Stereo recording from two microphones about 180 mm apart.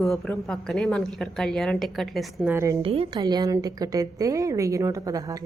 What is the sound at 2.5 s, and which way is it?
Speech, 15° right (ahead or behind).